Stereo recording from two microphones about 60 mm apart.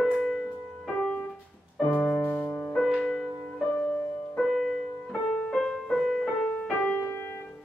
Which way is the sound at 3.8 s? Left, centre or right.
Centre.